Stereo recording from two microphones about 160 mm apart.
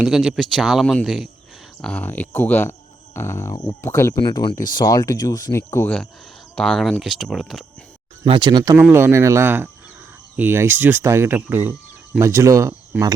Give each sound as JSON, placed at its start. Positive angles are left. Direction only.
{"t": 0.0, "sound": "speech", "side_deg": -5}
{"t": 1.8, "sound": "speech", "side_deg": 10}
{"t": 4.2, "sound": "speech", "side_deg": 30}
{"t": 8.2, "sound": "speech", "side_deg": -30}
{"t": 8.8, "sound": "speech", "side_deg": -15}